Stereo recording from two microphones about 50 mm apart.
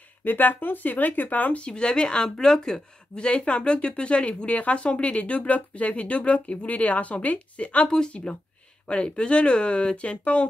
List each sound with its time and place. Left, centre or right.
0.2 s speech: left
1.6 s a woman's voice: centre